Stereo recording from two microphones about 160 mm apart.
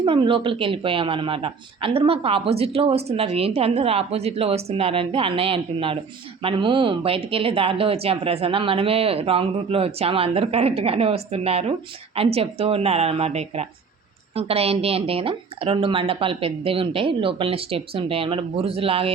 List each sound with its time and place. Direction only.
0.0 s speech: 30° right (ahead or behind)